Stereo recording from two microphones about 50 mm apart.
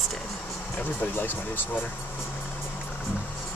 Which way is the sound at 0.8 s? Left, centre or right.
Left.